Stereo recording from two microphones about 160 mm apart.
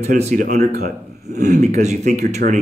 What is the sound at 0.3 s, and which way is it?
Speech, 55° right (ahead or behind).